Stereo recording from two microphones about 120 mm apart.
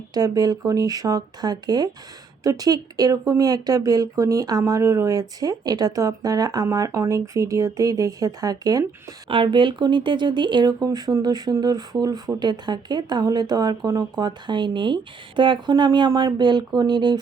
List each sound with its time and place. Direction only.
0.1 s speech: 30° right (ahead or behind)
9.3 s speech: 45° right (ahead or behind)